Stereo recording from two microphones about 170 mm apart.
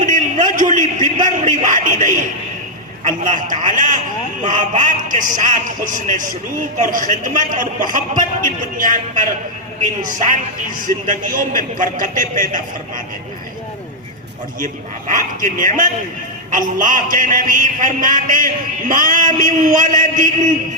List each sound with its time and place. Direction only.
0.0 s a man's voice: 50° right (ahead or behind)
14.6 s a man's voice: 50° right (ahead or behind)